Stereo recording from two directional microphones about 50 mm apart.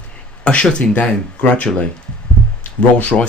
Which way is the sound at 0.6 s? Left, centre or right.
Left.